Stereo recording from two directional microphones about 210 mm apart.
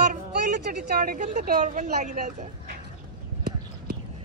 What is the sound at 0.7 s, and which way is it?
Speech, 45° right (ahead or behind).